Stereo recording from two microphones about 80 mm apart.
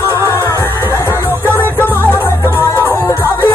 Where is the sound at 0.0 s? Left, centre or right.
Right.